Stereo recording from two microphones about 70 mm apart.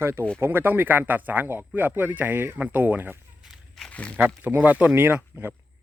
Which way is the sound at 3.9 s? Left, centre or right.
Centre.